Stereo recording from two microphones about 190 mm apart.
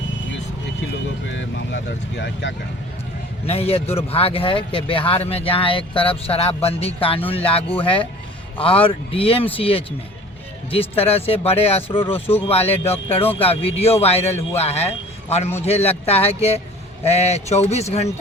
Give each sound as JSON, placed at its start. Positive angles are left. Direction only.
{"t": 1.3, "sound": "speech", "side_deg": 75}
{"t": 3.4, "sound": "speech", "side_deg": 30}